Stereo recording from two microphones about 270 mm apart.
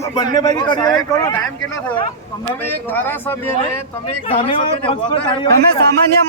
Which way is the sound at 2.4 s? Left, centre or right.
Centre.